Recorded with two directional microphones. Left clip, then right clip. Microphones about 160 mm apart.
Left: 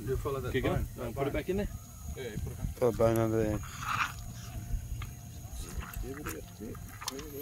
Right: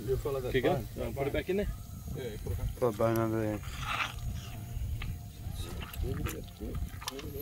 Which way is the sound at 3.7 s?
Centre (ahead or behind).